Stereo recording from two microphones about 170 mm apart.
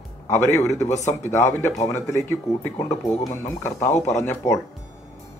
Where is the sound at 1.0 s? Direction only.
45° left (ahead or behind).